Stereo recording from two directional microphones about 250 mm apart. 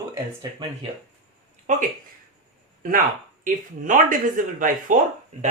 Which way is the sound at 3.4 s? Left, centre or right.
Right.